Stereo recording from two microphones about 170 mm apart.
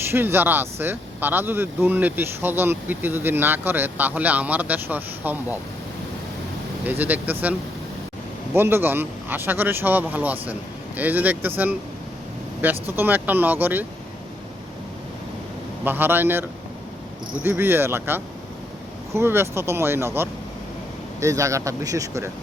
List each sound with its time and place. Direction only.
0.0 s speech: 15° right (ahead or behind)
6.8 s speech: 10° right (ahead or behind)
8.5 s speech: 15° right (ahead or behind)
13.0 s speech: 10° right (ahead or behind)
15.8 s speech: 10° right (ahead or behind)